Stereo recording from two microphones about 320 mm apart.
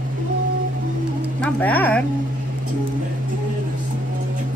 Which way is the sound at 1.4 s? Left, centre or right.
Centre.